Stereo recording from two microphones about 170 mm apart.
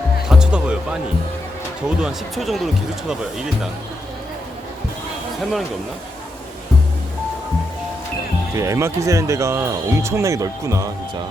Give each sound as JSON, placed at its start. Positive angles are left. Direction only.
{"t": 0.3, "sound": "music", "side_deg": -5}
{"t": 2.0, "sound": "speech", "side_deg": 0}
{"t": 5.4, "sound": "speech", "side_deg": 0}
{"t": 8.5, "sound": "speech", "side_deg": -15}